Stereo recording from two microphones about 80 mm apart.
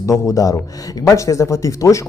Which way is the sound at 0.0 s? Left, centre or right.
Left.